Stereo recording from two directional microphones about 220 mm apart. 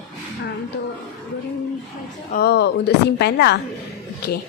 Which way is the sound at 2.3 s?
45° left (ahead or behind).